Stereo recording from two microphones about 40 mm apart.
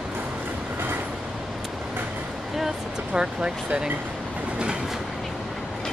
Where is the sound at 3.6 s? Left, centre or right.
Right.